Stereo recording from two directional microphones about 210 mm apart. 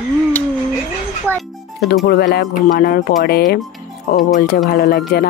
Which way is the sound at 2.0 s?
50° left (ahead or behind).